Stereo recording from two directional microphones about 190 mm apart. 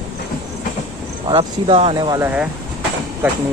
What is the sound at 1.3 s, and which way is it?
Speech, 30° right (ahead or behind).